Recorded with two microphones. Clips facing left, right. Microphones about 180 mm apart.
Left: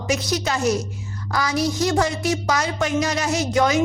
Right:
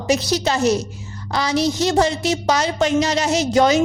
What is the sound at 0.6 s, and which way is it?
Speech, 70° right (ahead or behind).